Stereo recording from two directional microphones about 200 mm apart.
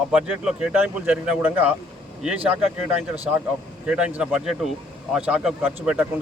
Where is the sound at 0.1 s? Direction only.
5° right (ahead or behind).